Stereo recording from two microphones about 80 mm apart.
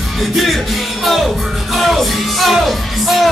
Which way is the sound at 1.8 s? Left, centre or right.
Centre.